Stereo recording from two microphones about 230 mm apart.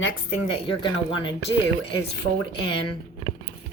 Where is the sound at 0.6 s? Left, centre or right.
Left.